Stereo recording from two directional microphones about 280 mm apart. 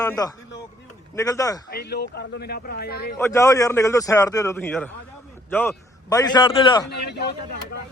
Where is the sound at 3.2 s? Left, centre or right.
Centre.